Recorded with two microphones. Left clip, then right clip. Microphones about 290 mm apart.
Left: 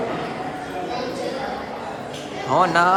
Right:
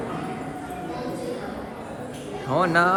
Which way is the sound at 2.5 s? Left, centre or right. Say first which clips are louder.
Left 3 dB; centre.